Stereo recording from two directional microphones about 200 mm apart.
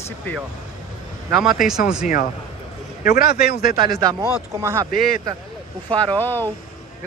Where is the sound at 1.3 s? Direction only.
Centre (ahead or behind).